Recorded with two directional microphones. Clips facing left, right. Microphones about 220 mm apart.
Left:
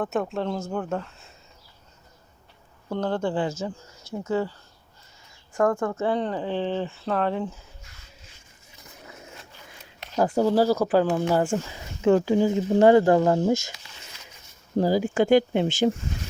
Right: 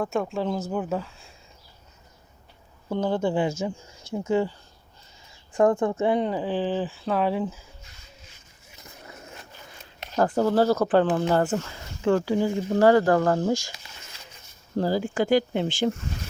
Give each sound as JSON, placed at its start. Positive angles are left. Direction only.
{"t": 0.0, "sound": "speech", "side_deg": 0}
{"t": 2.9, "sound": "speech", "side_deg": -10}
{"t": 5.5, "sound": "speech", "side_deg": -15}
{"t": 10.2, "sound": "speech", "side_deg": 10}
{"t": 14.8, "sound": "speech", "side_deg": 15}